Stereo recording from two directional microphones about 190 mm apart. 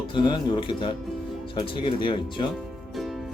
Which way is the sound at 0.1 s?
25° left (ahead or behind).